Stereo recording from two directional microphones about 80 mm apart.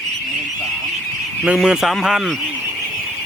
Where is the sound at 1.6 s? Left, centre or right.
Centre.